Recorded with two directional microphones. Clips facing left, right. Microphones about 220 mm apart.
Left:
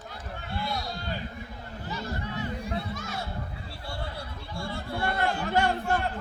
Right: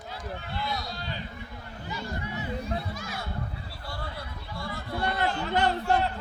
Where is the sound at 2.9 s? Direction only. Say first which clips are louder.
Left 1 dB; centre (ahead or behind).